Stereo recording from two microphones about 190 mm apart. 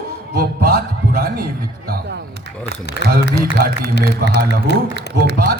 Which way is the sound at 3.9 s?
60° left (ahead or behind).